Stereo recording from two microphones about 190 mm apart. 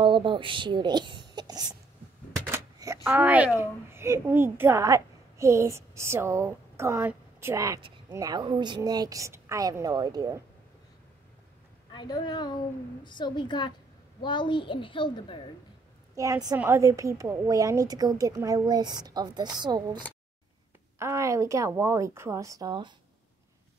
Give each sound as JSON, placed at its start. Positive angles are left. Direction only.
{"t": 0.0, "sound": "speech", "side_deg": -25}
{"t": 11.9, "sound": "a child's voice", "side_deg": 25}
{"t": 16.2, "sound": "a woman's voice", "side_deg": -15}
{"t": 21.0, "sound": "a woman's voice", "side_deg": -15}